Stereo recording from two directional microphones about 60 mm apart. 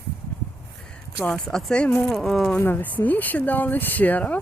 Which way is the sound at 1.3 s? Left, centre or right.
Centre.